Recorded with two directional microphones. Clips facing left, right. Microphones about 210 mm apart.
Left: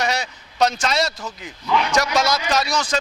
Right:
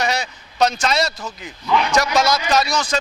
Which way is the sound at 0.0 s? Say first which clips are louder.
Right 1 dB; 10° right (ahead or behind).